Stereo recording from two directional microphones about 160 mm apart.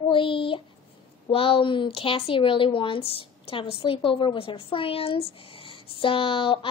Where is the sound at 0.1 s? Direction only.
30° left (ahead or behind).